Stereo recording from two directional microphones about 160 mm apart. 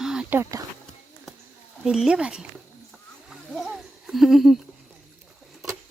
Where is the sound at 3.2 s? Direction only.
Centre (ahead or behind).